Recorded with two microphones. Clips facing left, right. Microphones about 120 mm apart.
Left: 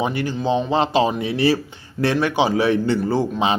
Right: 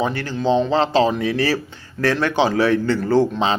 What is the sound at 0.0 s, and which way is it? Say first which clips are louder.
Speech: right 1 dB; 15° left (ahead or behind).